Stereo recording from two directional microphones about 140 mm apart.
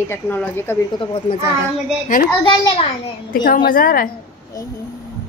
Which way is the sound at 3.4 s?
90° left.